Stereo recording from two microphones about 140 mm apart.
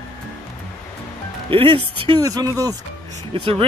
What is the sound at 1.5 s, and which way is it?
Speech, 40° right (ahead or behind).